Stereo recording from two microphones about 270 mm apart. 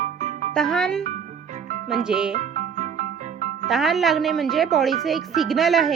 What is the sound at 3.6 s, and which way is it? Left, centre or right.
Speech, centre.